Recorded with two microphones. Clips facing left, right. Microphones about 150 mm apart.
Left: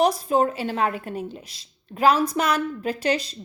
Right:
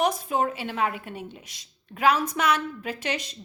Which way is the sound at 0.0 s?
35° left (ahead or behind).